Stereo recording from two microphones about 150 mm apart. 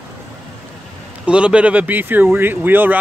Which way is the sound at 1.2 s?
5° right (ahead or behind).